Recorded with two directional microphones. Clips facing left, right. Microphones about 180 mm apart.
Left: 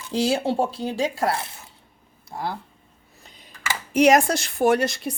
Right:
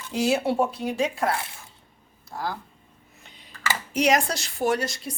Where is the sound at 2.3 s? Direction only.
20° left (ahead or behind).